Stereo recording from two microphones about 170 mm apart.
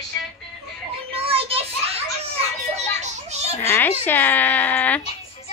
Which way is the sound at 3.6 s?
10° left (ahead or behind).